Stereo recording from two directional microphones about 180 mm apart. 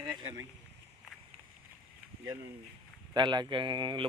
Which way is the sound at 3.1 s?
25° right (ahead or behind).